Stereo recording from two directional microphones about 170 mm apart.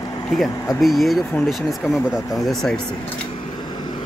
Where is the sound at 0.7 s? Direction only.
Centre (ahead or behind).